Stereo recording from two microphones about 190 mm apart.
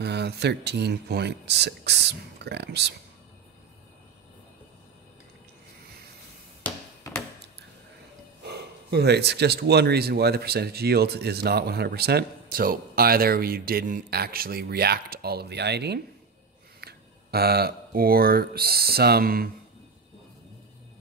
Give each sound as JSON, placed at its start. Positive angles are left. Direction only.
{"t": 0.0, "sound": "speech", "side_deg": -60}
{"t": 6.6, "sound": "a sound", "side_deg": 10}
{"t": 8.5, "sound": "speech", "side_deg": -60}